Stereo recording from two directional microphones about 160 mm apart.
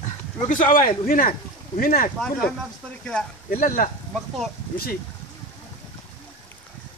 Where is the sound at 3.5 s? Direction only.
60° left (ahead or behind).